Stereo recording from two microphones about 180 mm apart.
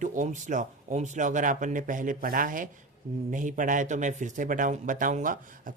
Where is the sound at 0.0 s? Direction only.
45° right (ahead or behind).